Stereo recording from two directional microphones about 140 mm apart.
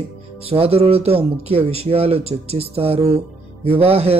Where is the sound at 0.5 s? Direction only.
45° right (ahead or behind).